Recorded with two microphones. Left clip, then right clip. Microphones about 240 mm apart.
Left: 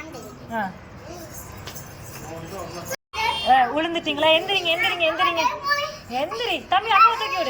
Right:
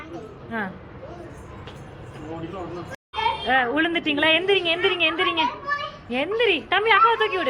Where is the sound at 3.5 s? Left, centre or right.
Centre.